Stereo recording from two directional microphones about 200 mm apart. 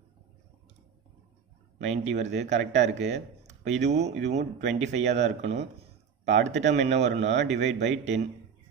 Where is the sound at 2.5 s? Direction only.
60° right (ahead or behind).